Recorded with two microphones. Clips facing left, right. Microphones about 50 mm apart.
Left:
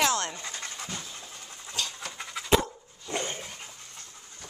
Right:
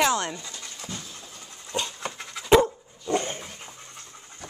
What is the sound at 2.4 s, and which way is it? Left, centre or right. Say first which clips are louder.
Dog: right 7 dB; centre.